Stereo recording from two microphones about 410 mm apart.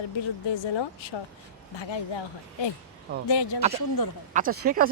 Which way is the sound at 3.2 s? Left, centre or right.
Left.